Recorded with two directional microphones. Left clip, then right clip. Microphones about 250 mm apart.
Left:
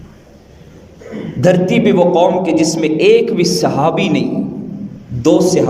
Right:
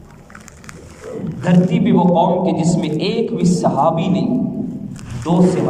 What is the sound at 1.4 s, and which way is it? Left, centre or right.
A man's voice, left.